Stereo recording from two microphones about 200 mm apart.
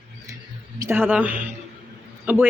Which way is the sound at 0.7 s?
15° right (ahead or behind).